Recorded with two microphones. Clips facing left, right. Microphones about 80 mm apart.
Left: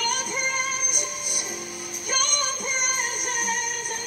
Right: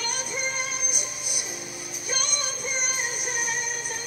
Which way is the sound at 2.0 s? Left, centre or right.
Left.